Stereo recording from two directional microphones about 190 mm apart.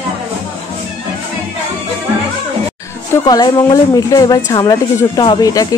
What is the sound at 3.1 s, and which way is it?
Speech, 20° left (ahead or behind).